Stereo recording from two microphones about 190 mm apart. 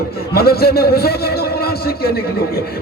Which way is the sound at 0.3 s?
55° left (ahead or behind).